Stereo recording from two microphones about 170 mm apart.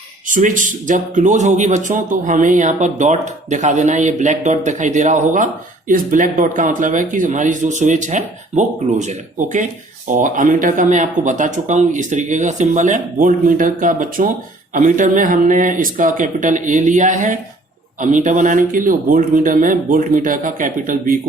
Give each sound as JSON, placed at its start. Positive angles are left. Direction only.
{"t": 0.3, "sound": "speech", "side_deg": -50}